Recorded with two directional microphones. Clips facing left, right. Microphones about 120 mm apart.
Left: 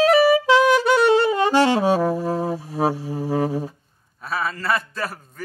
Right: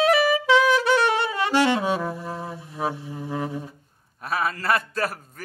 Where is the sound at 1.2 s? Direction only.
35° left (ahead or behind).